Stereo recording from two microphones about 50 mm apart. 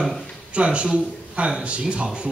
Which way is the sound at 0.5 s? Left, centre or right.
Right.